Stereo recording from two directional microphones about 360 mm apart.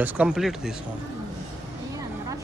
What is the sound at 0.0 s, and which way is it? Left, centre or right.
Speech, centre.